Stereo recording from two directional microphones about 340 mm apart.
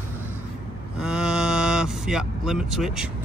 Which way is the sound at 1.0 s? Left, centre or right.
Centre.